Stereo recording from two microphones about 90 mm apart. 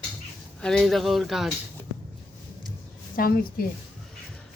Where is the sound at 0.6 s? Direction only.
5° left (ahead or behind).